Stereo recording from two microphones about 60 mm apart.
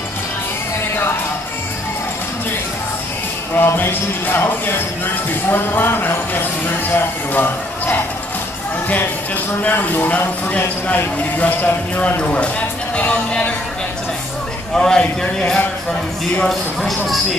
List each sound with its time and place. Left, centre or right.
3.5 s speech: left
9.6 s speech: left
14.8 s a man's voice: centre
16.4 s speech: centre